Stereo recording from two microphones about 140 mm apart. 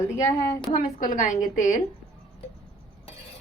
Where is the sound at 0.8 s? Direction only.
65° left (ahead or behind).